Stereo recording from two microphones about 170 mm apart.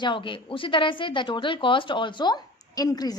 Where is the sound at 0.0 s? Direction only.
30° left (ahead or behind).